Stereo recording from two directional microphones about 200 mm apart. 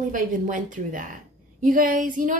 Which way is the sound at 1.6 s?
40° right (ahead or behind).